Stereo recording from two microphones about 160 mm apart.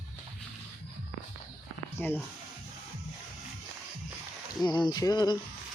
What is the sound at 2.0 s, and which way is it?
Speech, 10° left (ahead or behind).